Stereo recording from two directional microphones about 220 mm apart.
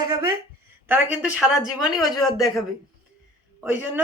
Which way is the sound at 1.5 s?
15° left (ahead or behind).